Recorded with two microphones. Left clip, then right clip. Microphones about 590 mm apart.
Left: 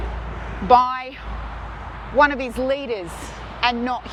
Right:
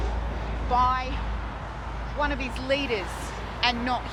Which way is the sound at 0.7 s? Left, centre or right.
Left.